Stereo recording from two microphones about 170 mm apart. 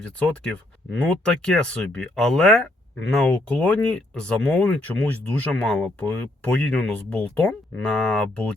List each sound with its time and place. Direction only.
1.2 s speech: 5° left (ahead or behind)